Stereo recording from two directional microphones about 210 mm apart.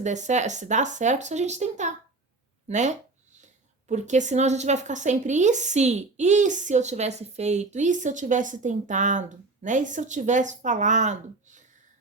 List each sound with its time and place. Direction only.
0.0 s a woman's voice: 35° right (ahead or behind)